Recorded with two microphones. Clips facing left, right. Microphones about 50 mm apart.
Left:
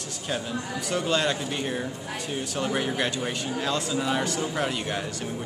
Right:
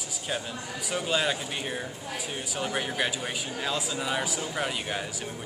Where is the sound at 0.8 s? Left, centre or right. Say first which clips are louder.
Left 2 dB; centre.